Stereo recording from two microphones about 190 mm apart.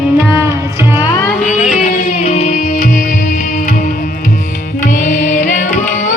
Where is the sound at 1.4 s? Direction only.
40° left (ahead or behind).